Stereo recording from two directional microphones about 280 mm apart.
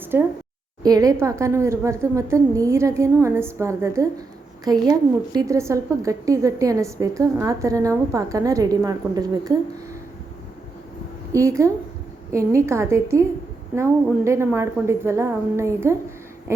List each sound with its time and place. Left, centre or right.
0.0 s a sound: centre
0.8 s a woman's voice: centre
11.3 s a woman's voice: centre